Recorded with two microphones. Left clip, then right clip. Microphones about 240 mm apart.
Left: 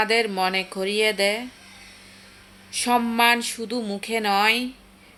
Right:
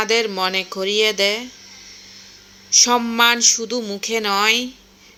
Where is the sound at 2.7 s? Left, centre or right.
Centre.